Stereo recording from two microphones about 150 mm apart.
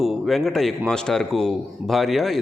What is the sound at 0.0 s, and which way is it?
A man's voice, centre (ahead or behind).